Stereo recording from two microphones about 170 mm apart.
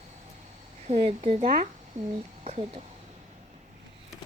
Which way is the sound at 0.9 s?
35° right (ahead or behind).